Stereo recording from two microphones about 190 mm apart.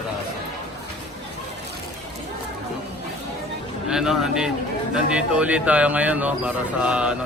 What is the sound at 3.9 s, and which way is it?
A man's voice, centre (ahead or behind).